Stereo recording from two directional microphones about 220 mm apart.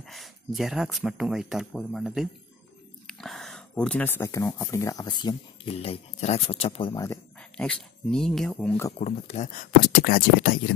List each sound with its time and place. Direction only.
0.0 s speech: centre (ahead or behind); by 7.2 s 20° left (ahead or behind)
7.3 s speech: 5° left (ahead or behind)
8.9 s speech: 30° left (ahead or behind)